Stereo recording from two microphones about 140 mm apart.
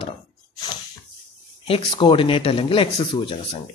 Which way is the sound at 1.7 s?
40° left (ahead or behind).